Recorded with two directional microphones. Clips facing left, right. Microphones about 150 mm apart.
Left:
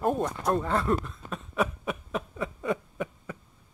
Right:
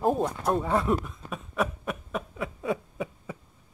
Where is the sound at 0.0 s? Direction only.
5° right (ahead or behind).